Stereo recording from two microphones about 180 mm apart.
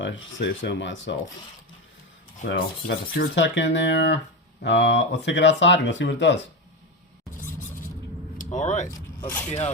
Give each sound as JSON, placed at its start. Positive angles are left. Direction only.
{"t": 0.0, "sound": "speech", "side_deg": 90}
{"t": 2.6, "sound": "speech", "side_deg": 55}
{"t": 3.3, "sound": "speech", "side_deg": 80}
{"t": 8.4, "sound": "speech", "side_deg": 45}
{"t": 8.9, "sound": "speech", "side_deg": 10}